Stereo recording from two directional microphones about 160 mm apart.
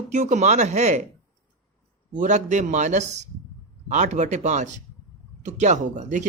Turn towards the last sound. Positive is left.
turn(degrees=-50)  # may be behind; listen again after turning